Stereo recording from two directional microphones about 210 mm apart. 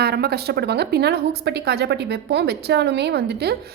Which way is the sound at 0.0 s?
50° right (ahead or behind).